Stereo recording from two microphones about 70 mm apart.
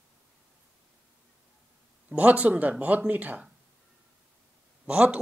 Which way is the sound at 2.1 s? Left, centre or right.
Centre.